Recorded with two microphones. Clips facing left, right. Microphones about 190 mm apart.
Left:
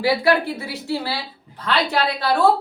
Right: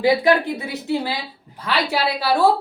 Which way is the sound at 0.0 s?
20° right (ahead or behind).